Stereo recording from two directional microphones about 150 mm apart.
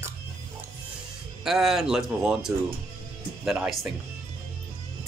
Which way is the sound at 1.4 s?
Centre (ahead or behind).